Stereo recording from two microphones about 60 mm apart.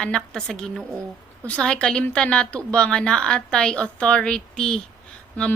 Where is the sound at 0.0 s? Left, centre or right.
Centre.